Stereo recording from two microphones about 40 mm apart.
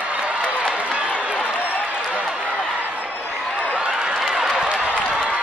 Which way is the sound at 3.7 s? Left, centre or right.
Right.